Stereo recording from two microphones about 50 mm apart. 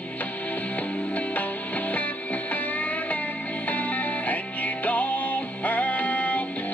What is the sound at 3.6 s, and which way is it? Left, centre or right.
Music, left.